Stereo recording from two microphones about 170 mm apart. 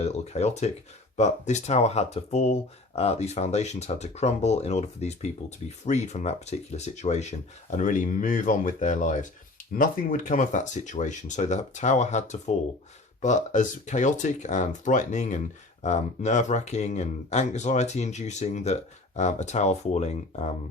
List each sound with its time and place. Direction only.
0.0 s speech: 40° left (ahead or behind)